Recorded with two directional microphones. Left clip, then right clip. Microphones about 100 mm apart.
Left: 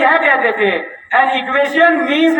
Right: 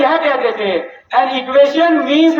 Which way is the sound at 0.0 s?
40° right (ahead or behind).